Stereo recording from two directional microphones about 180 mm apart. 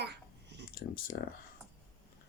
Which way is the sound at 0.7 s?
55° left (ahead or behind).